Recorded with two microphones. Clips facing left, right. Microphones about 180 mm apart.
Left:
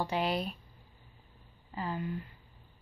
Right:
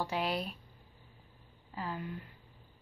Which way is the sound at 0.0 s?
Centre (ahead or behind).